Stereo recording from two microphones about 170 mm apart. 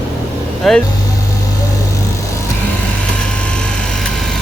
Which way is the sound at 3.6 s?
5° left (ahead or behind).